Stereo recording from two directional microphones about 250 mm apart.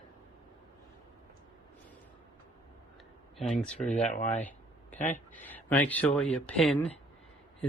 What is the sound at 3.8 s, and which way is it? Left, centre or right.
Speech, left.